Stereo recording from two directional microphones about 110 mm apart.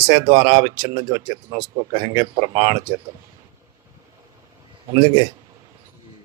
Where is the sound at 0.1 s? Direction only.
55° right (ahead or behind).